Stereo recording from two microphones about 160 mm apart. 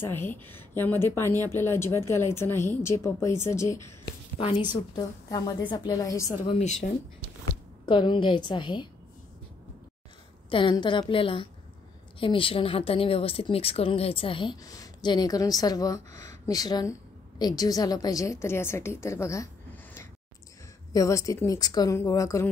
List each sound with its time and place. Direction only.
0.0 s a woman's voice: 15° left (ahead or behind)
4.4 s a woman's voice: 30° left (ahead or behind)
6.4 s speech: 45° left (ahead or behind)
7.8 s a woman's voice: 30° left (ahead or behind)
10.5 s a woman's voice: 30° left (ahead or behind)